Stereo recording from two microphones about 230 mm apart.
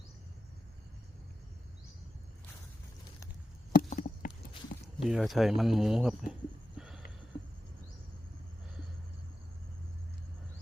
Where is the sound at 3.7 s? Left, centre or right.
Left.